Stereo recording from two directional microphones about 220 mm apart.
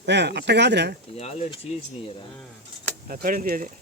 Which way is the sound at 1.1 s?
30° left (ahead or behind).